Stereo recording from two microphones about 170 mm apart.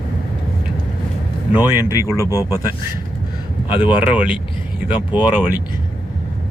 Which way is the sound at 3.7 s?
10° right (ahead or behind).